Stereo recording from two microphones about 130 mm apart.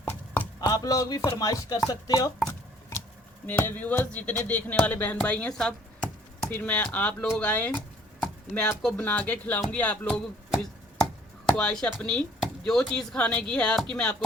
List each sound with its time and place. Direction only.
0.0 s chopping: 15° left (ahead or behind)
0.7 s speech: 30° left (ahead or behind)
3.4 s speech: 15° left (ahead or behind)
11.4 s speech: 5° left (ahead or behind)